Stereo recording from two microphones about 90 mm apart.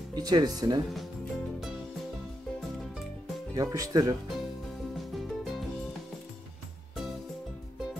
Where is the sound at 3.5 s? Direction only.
40° right (ahead or behind).